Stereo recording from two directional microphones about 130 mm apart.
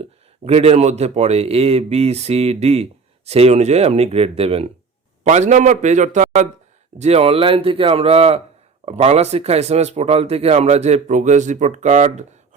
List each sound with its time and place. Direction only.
0.0 s a man's voice: 50° right (ahead or behind)
5.2 s a man's voice: 60° right (ahead or behind)
7.0 s a man's voice: 50° right (ahead or behind); by 12.2 s 65° right (ahead or behind)